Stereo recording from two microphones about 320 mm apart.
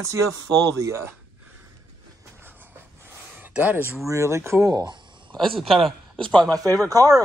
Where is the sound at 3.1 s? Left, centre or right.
Centre.